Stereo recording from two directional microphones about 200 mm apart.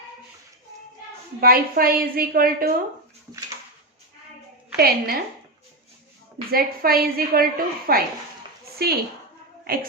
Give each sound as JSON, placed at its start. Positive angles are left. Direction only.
{"t": 1.4, "sound": "a woman's voice", "side_deg": -45}
{"t": 4.8, "sound": "a woman's voice", "side_deg": -50}
{"t": 6.5, "sound": "a woman's voice", "side_deg": -50}